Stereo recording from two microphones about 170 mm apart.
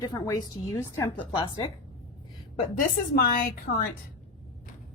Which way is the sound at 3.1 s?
60° left (ahead or behind).